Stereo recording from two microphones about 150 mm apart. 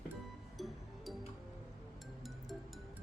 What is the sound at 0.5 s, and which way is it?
Music, centre (ahead or behind).